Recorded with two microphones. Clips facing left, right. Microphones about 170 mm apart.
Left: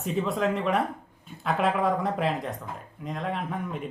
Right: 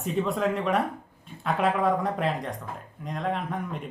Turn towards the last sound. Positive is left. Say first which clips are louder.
# even
turn(degrees=0)  # may be behind; listen again after turning